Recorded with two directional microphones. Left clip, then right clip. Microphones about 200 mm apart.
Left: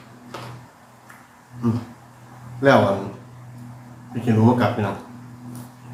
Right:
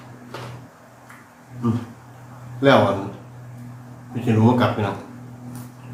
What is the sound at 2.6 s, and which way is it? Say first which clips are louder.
Speech: even; centre (ahead or behind).